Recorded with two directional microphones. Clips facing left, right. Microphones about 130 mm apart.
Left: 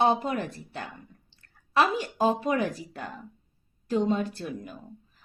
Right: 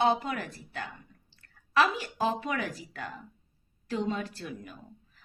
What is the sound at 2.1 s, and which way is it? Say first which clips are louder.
Speech: left 8 dB; 35° left (ahead or behind).